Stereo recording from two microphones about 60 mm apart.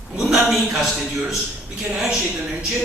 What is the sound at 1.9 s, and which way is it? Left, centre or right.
Speech, centre.